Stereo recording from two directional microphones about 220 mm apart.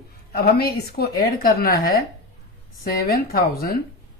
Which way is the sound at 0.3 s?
45° left (ahead or behind).